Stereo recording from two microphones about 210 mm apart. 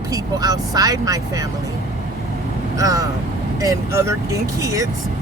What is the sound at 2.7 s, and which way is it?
Speech, 15° right (ahead or behind).